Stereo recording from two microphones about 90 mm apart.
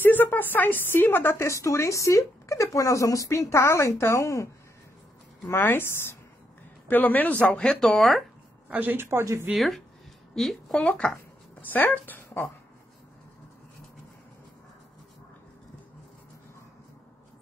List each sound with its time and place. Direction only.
0.0 s a woman's voice: 20° left (ahead or behind)
5.5 s a woman's voice: 25° left (ahead or behind); by 8.2 s centre (ahead or behind)
8.6 s speech: 20° right (ahead or behind)
9.5 s speech: centre (ahead or behind); by 12.4 s 20° left (ahead or behind)